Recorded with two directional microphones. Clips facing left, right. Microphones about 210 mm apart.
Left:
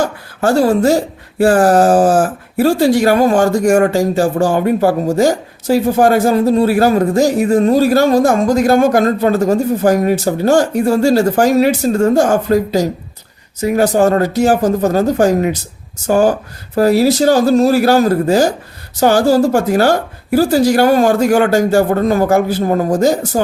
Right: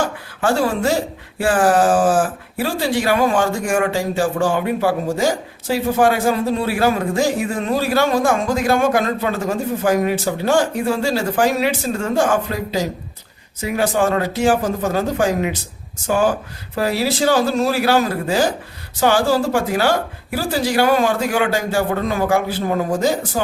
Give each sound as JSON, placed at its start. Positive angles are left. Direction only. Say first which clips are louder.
{"t": 0.0, "sound": "a woman's voice", "louder": "left 4 dB", "side_deg": 40}